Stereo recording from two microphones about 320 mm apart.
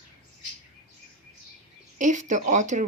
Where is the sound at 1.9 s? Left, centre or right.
Right.